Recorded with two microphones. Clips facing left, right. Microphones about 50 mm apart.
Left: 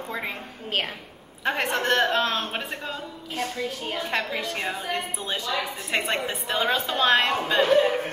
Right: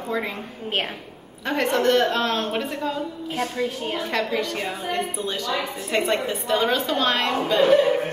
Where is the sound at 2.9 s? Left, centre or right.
Centre.